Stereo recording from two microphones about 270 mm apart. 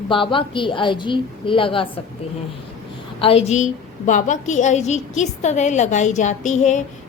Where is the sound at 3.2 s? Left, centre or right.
Left.